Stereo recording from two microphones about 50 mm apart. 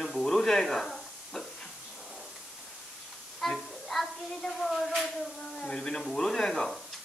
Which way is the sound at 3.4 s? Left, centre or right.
Centre.